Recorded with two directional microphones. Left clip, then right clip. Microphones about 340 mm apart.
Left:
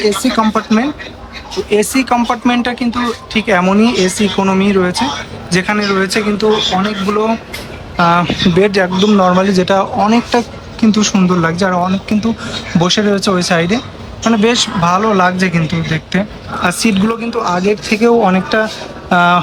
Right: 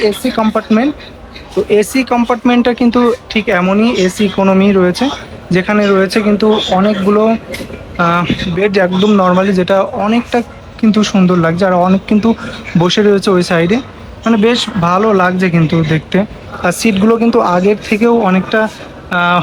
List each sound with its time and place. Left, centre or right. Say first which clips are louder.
0.0 s speech: even; centre